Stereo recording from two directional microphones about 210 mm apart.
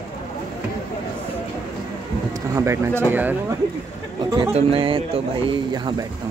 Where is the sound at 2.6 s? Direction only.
15° right (ahead or behind).